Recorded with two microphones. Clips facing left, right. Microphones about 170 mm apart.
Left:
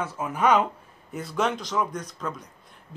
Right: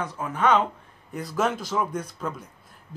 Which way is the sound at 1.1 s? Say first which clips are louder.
Right 1 dB; centre (ahead or behind).